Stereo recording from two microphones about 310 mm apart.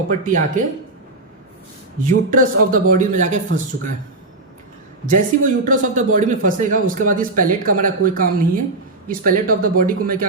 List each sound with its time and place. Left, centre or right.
0.1 s a man's voice: right
2.0 s a man's voice: right
5.0 s a man's voice: right